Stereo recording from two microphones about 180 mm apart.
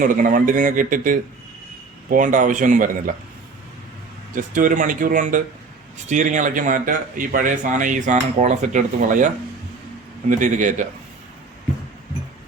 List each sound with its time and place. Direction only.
0.0 s speech: 50° right (ahead or behind)
4.4 s speech: 45° right (ahead or behind)